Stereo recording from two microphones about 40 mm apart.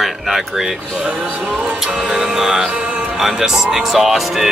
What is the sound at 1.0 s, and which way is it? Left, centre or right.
Speech, right.